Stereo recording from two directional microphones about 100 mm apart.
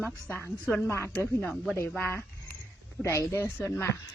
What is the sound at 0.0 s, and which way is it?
Speech, 20° left (ahead or behind).